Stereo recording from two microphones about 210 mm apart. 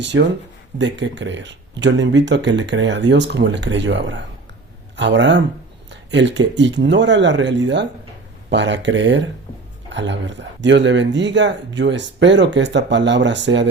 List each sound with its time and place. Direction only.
0.0 s speech: 60° right (ahead or behind)
5.9 s a sound: 60° right (ahead or behind)
6.6 s speech: 60° right (ahead or behind)